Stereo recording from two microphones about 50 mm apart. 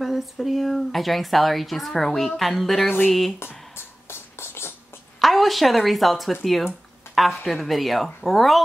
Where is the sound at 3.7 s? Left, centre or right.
Left.